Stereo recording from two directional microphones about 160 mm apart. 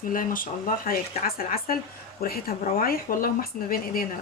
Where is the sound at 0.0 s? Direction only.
60° left (ahead or behind).